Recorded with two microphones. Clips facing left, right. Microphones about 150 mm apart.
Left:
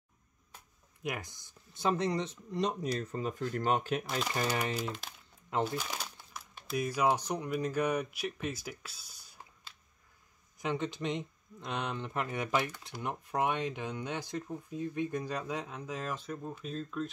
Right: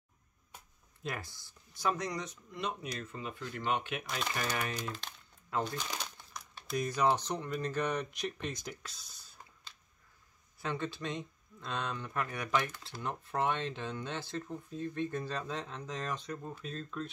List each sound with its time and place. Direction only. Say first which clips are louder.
1.0 s speech: left 2 dB; 15° left (ahead or behind); by 4.2 s 35° left (ahead or behind)
5.5 s speech: left 3 dB; 20° left (ahead or behind)
5.9 s speech: even; 5° left (ahead or behind)